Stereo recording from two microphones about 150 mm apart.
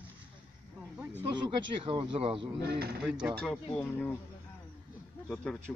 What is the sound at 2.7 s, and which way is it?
Speech, 90° right.